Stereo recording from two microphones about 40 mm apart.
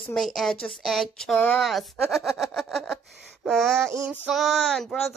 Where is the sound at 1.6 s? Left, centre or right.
Centre.